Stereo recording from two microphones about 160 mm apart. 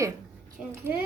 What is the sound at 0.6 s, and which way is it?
Speech, 5° right (ahead or behind).